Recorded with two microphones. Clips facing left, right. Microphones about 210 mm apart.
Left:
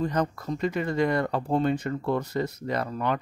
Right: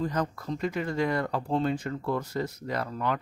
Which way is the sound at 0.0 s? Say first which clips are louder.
Left 3 dB; 20° left (ahead or behind).